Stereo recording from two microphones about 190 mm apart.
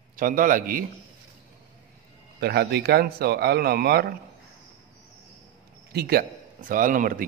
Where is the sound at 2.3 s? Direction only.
60° right (ahead or behind).